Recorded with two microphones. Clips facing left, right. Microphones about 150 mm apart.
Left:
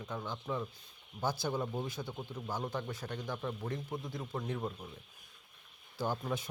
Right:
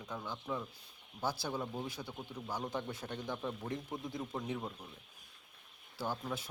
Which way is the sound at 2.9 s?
25° right (ahead or behind).